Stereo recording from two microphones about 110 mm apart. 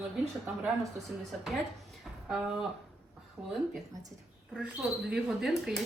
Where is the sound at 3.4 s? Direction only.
20° right (ahead or behind).